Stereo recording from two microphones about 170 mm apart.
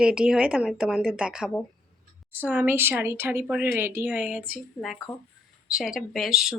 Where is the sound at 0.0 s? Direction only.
5° right (ahead or behind).